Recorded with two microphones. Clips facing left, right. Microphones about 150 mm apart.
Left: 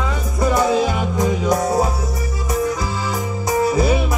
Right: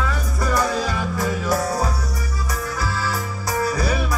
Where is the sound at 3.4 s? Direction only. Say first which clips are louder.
Left 6 dB; 20° left (ahead or behind).